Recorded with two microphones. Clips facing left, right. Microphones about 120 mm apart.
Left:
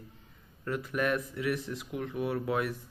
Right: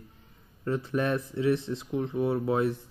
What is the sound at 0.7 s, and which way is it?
Speech, 30° right (ahead or behind).